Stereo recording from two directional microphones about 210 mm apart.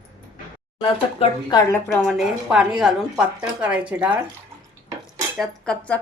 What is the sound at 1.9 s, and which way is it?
A woman's voice, centre (ahead or behind).